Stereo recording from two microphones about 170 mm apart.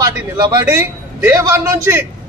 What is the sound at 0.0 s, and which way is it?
A man's voice, 20° right (ahead or behind).